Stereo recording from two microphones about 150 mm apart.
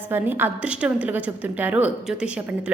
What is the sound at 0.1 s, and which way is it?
A woman's voice, 15° right (ahead or behind).